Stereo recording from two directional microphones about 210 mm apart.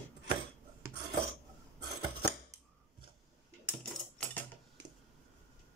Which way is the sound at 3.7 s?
5° left (ahead or behind).